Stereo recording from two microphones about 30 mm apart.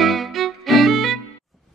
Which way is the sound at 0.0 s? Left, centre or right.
Centre.